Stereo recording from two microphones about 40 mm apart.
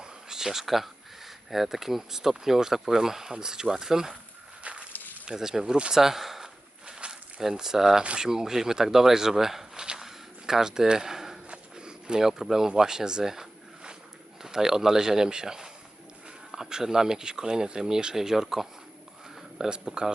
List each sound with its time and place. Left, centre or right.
0.0 s speech: centre
4.7 s snake: right
5.2 s speech: centre
5.9 s speech: centre
6.8 s snake: right
7.4 s speech: centre
10.0 s a sound: centre
11.4 s a sound: right
14.4 s speech: centre